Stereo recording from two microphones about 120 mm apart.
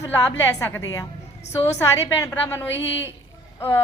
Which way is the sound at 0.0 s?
20° left (ahead or behind).